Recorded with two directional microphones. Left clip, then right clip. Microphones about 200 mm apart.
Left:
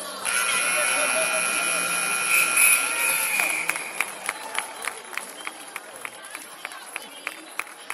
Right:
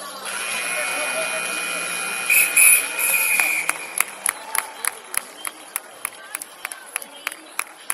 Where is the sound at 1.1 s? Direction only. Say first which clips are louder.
Left 1 dB; 40° left (ahead or behind).